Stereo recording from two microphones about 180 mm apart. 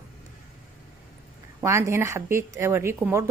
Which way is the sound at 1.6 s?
15° right (ahead or behind).